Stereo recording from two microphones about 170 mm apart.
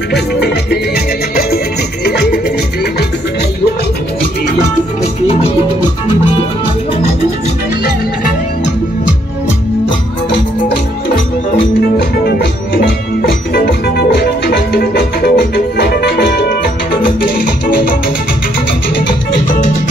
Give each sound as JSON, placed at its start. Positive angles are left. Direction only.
{"t": 0.4, "sound": "music", "side_deg": 75}
{"t": 12.0, "sound": "music", "side_deg": 60}
{"t": 17.2, "sound": "music", "side_deg": 55}